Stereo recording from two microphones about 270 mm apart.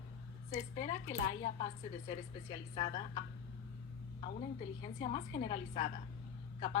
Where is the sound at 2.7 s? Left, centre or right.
Centre.